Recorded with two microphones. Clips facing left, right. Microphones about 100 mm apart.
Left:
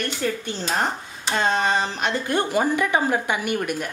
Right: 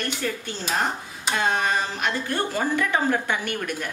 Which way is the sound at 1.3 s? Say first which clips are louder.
Left 2 dB; 25° left (ahead or behind).